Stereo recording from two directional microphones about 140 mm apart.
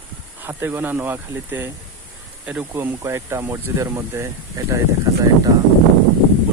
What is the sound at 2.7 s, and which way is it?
Speech, 20° right (ahead or behind).